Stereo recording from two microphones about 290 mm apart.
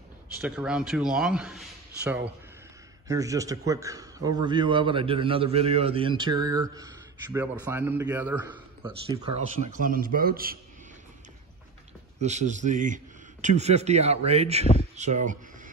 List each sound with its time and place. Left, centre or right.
0.4 s a man's voice: centre
9.6 s speech: right
12.2 s speech: right